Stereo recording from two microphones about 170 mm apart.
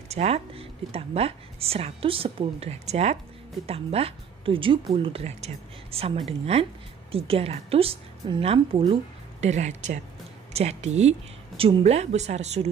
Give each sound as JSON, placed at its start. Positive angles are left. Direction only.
{"t": 0.1, "sound": "speech", "side_deg": -40}